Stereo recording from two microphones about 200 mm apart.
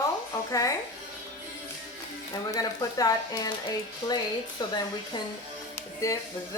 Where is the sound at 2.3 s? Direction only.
20° left (ahead or behind).